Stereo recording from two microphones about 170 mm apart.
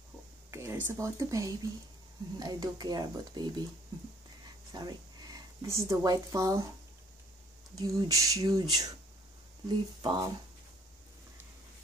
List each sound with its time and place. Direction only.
0.5 s speech: 15° right (ahead or behind)
4.7 s speech: 20° right (ahead or behind)
7.7 s speech: 20° right (ahead or behind)